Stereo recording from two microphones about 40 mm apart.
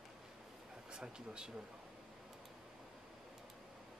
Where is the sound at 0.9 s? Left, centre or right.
Right.